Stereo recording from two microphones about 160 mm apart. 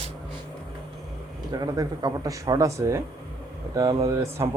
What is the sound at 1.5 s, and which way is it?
Speech, 25° right (ahead or behind).